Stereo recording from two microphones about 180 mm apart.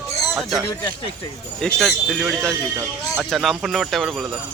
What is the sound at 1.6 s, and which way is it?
Speech, 5° left (ahead or behind).